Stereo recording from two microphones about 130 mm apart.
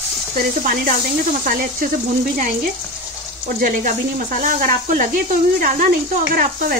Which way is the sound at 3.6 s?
85° right.